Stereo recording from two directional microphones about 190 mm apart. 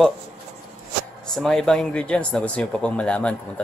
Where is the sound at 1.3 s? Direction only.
Centre (ahead or behind).